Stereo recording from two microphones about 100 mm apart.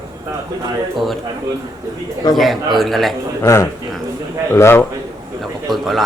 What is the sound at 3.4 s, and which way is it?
A man's voice, 25° left (ahead or behind).